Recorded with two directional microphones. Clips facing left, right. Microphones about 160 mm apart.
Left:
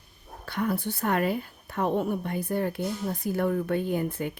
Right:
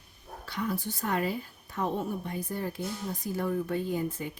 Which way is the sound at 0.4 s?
55° left (ahead or behind).